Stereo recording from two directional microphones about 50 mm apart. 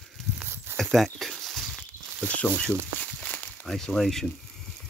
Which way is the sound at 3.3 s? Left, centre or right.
Left.